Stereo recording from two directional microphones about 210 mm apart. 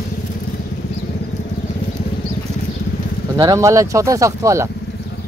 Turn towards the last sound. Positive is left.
turn(degrees=-15)  # may be behind; listen again after turning